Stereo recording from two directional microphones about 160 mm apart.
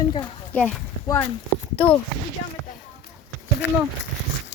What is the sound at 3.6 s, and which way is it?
Speech, 90° left.